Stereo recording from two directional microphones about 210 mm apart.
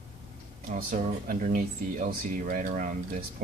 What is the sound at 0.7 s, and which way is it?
Speech, 40° right (ahead or behind).